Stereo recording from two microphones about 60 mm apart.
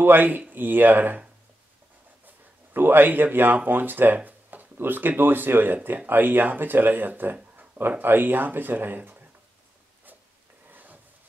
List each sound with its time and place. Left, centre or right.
0.0 s speech: right
2.2 s speech: right
10.7 s a sound: right